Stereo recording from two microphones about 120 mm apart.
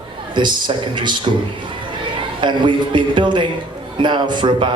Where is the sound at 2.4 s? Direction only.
40° right (ahead or behind).